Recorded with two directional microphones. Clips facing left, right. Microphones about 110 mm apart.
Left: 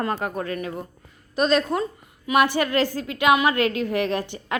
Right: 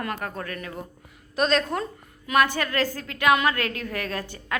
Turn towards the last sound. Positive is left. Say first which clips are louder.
# left 4 dB
turn(degrees=20)  # may be behind; listen again after turning